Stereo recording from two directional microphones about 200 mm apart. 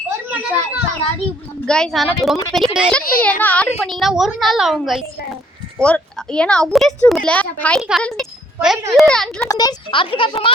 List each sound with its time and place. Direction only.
0.3 s a child's voice: 5° right (ahead or behind)
1.6 s a woman's voice: 5° left (ahead or behind)
9.5 s speech: 20° left (ahead or behind)